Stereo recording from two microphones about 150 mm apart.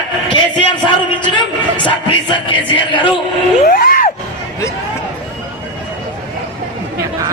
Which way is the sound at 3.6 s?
70° left (ahead or behind).